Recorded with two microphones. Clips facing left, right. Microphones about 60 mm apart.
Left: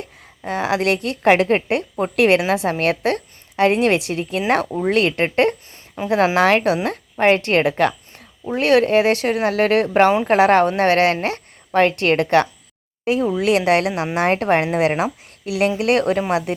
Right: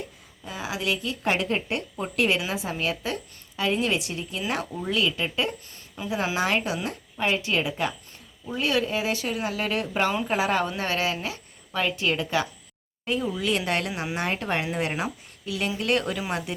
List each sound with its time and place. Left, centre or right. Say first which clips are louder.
0.4 s a woman's voice: left 10 dB; left
4.8 s a woman's voice: left 8 dB; left
6.8 s a woman's voice: left 11 dB; left
8.4 s a woman's voice: left 10 dB; left
10.2 s a woman's voice: left 11 dB; left
13.2 s speech: left 9 dB; left
13.5 s a woman's voice: left 11 dB; left
15.8 s a woman's voice: left 8 dB; left